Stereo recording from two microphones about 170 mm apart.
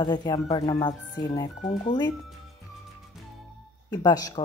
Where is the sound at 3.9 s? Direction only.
20° left (ahead or behind).